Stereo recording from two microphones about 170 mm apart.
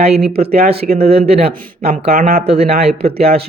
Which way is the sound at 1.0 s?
35° right (ahead or behind).